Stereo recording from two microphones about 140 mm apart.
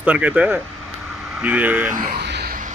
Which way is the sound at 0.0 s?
10° right (ahead or behind).